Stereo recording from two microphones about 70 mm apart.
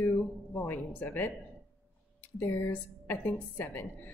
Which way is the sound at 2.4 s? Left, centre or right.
Left.